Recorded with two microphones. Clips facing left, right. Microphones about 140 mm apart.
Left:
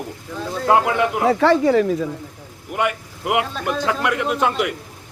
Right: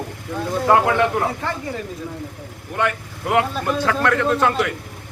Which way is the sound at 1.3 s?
90° left.